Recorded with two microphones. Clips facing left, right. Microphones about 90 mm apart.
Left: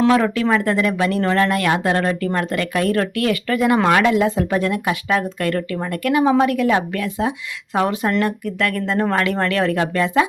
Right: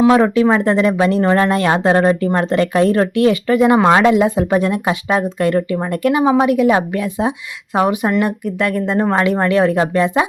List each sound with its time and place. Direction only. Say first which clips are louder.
0.1 s speech: right 4 dB; 20° right (ahead or behind)